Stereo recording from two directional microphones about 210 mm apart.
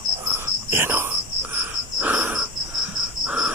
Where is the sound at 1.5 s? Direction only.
10° right (ahead or behind).